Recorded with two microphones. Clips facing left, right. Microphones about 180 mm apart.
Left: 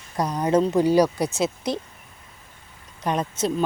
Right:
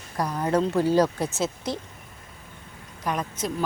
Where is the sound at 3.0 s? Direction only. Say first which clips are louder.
Left 4 dB; 30° left (ahead or behind).